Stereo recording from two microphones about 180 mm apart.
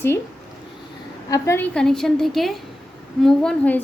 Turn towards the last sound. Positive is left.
turn(degrees=5)  # may be behind; listen again after turning